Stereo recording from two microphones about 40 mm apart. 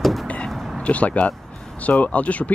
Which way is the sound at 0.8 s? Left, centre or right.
Left.